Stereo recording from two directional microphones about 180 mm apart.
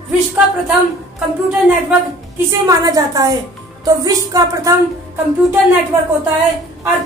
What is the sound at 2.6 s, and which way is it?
Speech, 20° right (ahead or behind).